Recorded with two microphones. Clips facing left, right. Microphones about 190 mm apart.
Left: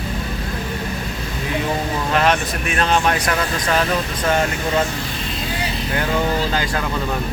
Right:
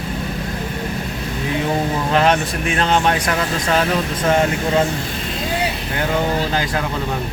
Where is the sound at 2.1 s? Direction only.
30° right (ahead or behind).